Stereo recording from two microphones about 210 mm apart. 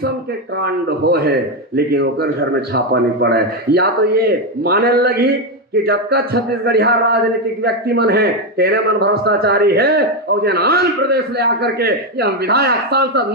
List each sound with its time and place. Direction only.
0.6 s speech: 50° right (ahead or behind)